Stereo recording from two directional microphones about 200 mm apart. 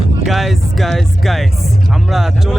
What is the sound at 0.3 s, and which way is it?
Speech, centre (ahead or behind).